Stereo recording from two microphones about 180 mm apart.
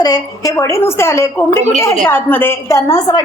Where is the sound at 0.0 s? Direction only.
20° left (ahead or behind).